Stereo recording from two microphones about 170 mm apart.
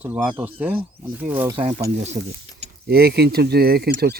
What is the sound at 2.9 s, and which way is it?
Speech, 65° right (ahead or behind).